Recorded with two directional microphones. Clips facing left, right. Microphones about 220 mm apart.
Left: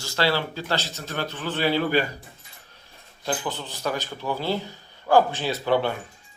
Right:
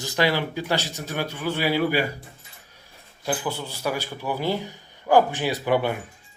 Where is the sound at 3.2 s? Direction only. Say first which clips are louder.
Right 1 dB; 10° right (ahead or behind).